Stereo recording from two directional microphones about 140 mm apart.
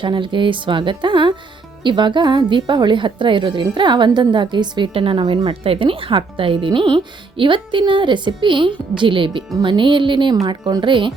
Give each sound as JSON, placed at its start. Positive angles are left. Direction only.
{"t": 0.0, "sound": "a woman's voice", "side_deg": -35}